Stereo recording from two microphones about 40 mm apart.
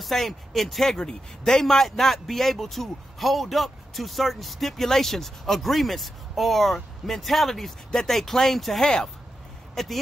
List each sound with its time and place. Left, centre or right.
0.0 s speech: centre
0.9 s a man's voice: centre
8.8 s a man's voice: centre
9.8 s a man's voice: centre